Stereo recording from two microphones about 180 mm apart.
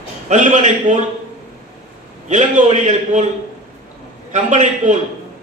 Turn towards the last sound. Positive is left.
turn(degrees=-45)  # may be behind; listen again after turning